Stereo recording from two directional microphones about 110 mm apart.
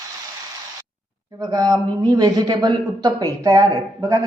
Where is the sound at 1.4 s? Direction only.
35° right (ahead or behind).